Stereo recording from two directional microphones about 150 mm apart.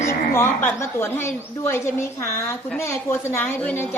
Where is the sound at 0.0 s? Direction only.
20° left (ahead or behind).